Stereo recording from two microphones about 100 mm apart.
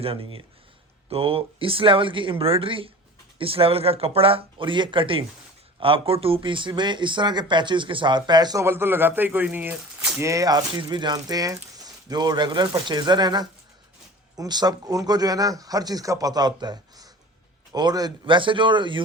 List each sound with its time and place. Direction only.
0.0 s speech: 65° right (ahead or behind); by 8.6 s 45° right (ahead or behind)
8.6 s speech: 25° right (ahead or behind)
10.2 s speech: 30° right (ahead or behind)
10.8 s speech: 45° right (ahead or behind)